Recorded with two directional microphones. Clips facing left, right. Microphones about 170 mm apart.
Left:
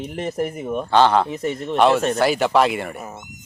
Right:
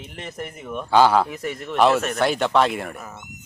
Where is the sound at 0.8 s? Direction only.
5° right (ahead or behind).